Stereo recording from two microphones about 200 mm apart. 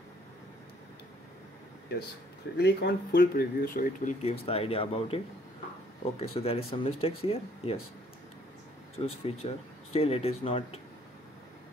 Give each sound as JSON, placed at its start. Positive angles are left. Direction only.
{"t": 2.5, "sound": "speech", "side_deg": 55}
{"t": 8.9, "sound": "speech", "side_deg": 30}